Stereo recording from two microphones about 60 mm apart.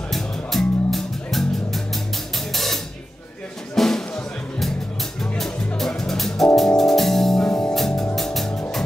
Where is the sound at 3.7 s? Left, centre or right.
Centre.